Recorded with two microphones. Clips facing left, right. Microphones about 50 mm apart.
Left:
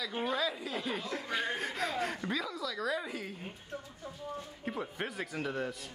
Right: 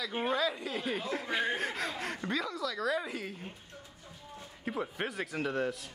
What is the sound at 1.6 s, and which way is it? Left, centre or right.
Speech, centre.